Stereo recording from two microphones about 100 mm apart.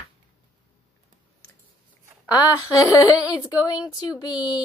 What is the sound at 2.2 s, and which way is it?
Speech, 40° left (ahead or behind).